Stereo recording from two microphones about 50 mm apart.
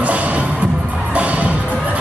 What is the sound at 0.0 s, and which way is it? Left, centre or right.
Music, right.